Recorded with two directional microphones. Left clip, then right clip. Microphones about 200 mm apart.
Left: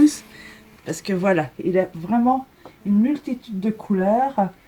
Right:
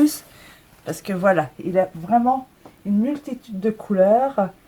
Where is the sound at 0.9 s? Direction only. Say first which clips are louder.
Right 2 dB; 30° right (ahead or behind).